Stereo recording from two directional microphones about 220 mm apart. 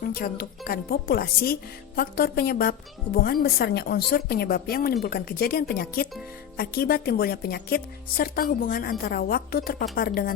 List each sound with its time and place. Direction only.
0.0 s a woman's voice: 40° left (ahead or behind)